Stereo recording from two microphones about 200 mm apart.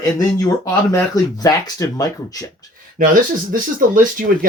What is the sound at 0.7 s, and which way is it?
Speech, 15° left (ahead or behind).